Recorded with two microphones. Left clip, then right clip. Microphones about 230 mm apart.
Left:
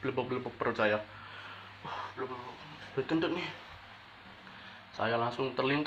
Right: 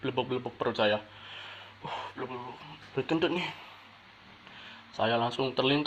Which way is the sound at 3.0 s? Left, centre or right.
Right.